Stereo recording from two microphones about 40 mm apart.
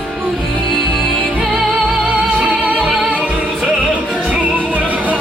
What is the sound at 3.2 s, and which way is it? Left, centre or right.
Music, right.